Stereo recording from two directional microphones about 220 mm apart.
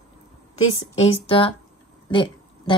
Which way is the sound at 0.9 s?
25° left (ahead or behind).